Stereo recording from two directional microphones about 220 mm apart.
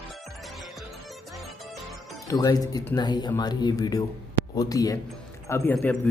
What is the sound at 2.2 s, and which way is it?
A man's voice, 15° left (ahead or behind).